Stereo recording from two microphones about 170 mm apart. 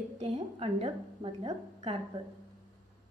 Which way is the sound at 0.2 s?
35° right (ahead or behind).